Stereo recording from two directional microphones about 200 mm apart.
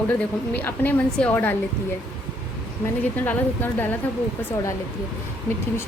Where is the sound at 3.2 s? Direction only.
10° left (ahead or behind).